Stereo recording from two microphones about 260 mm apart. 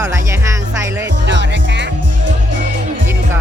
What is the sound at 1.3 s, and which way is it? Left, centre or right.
Music, right.